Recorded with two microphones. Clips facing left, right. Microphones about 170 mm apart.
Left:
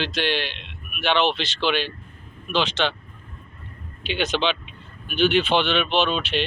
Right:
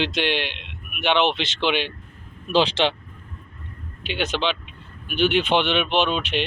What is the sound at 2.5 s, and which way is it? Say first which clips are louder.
Speech: right 4 dB; 30° right (ahead or behind).